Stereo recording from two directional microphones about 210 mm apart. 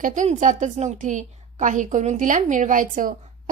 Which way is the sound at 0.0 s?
35° right (ahead or behind).